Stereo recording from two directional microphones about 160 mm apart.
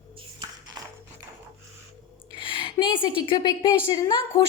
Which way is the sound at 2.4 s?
30° left (ahead or behind).